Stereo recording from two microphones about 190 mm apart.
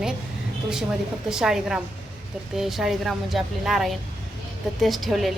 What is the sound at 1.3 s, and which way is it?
A woman's voice, 5° right (ahead or behind).